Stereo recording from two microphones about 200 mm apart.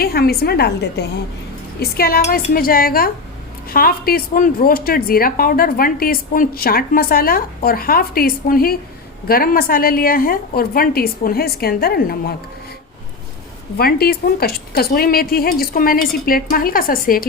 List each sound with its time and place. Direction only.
0.0 s speech: 50° left (ahead or behind)
13.7 s speech: 50° left (ahead or behind)